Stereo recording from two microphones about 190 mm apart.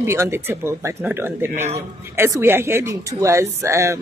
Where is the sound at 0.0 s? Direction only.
15° right (ahead or behind).